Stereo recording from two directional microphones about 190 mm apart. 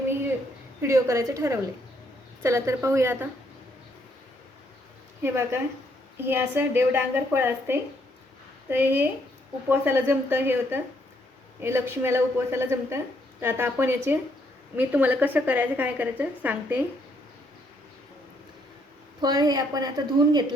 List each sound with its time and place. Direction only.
0.8 s a woman's voice: 15° right (ahead or behind)
5.2 s a woman's voice: 15° right (ahead or behind)
19.2 s a woman's voice: 20° right (ahead or behind)